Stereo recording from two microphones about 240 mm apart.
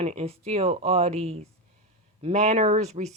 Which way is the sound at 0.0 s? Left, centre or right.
Right.